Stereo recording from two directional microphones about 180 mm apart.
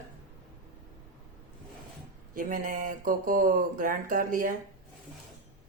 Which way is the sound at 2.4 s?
50° right (ahead or behind).